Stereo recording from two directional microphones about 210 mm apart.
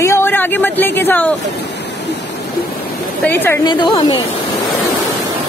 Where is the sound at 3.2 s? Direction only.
10° left (ahead or behind).